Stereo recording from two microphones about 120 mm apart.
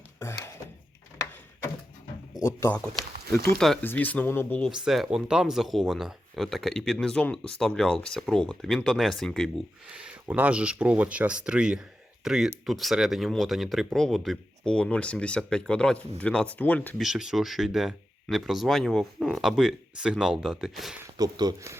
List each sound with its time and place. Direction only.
0.2 s a sound: 20° left (ahead or behind)
2.5 s speech: 20° left (ahead or behind)
3.5 s speech: 5° left (ahead or behind)
3.8 s speech: 15° left (ahead or behind)
4.7 s speech: 5° right (ahead or behind)
9.9 s speech: 10° right (ahead or behind); by 17.0 s 10° left (ahead or behind)
17.0 s speech: 5° right (ahead or behind)
21.0 s speech: 35° right (ahead or behind)